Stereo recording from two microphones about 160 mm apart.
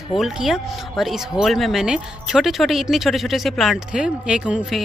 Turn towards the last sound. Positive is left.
turn(degrees=-5)  # may be behind; listen again after turning